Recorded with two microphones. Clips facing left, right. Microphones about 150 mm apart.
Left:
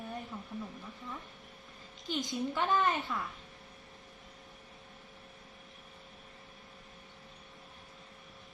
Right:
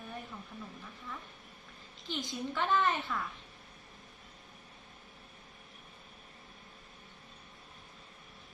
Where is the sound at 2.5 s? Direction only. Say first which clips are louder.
Even; 15° left (ahead or behind).